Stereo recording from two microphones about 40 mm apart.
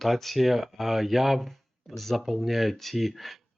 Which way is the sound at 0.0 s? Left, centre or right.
Centre.